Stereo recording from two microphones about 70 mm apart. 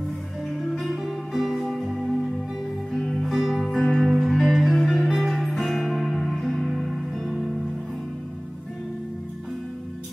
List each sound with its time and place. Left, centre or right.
0.7 s music: centre